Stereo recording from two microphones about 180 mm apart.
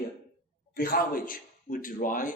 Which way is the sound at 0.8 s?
50° left (ahead or behind).